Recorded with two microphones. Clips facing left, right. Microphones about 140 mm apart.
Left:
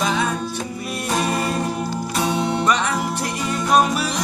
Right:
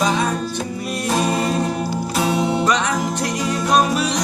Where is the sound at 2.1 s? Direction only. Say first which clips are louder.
Right 2 dB; 5° right (ahead or behind).